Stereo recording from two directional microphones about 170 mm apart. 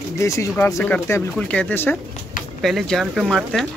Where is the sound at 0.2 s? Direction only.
15° left (ahead or behind).